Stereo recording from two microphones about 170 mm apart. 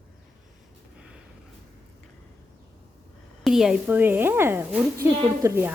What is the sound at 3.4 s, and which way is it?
A woman's voice, centre (ahead or behind).